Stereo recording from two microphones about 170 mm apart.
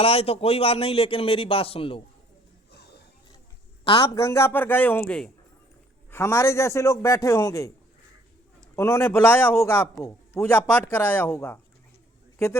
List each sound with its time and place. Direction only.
0.0 s a man's voice: 35° left (ahead or behind)
3.8 s a man's voice: 35° left (ahead or behind)
4.1 s a man's voice: 15° left (ahead or behind)
8.7 s a man's voice: 15° left (ahead or behind)